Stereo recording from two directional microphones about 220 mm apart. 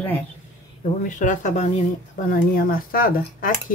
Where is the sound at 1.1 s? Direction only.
35° left (ahead or behind).